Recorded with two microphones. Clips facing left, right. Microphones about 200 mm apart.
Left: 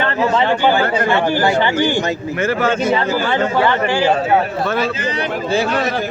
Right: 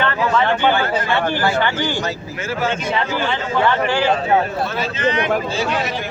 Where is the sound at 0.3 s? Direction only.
10° left (ahead or behind).